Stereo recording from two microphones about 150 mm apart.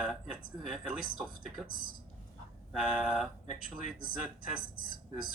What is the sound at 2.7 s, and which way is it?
Speech, 5° right (ahead or behind).